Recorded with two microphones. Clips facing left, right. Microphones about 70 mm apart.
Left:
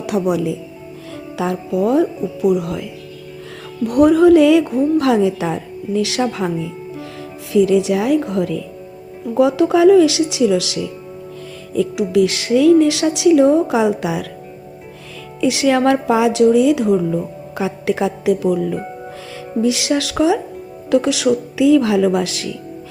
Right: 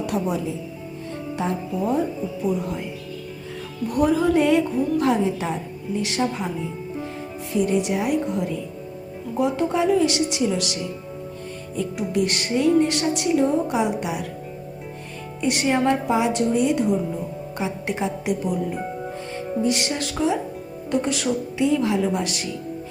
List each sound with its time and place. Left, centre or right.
0.0 s speech: left
1.4 s a woman's voice: left
3.8 s a woman's voice: left
7.5 s a woman's voice: left
11.9 s a woman's voice: left
15.4 s a woman's voice: left